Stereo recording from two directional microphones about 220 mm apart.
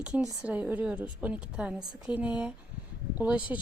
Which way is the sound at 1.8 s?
15° right (ahead or behind).